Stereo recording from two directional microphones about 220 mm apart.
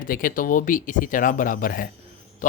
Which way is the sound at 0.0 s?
40° left (ahead or behind).